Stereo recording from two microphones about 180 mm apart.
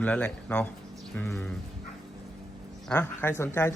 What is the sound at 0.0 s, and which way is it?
Speech, 10° left (ahead or behind).